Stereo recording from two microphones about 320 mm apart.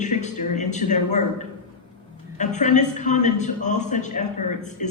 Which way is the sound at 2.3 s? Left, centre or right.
Left.